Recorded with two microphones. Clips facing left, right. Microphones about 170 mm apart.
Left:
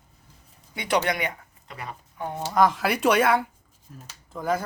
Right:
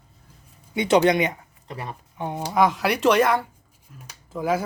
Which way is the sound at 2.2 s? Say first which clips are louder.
Right 2 dB; 15° right (ahead or behind).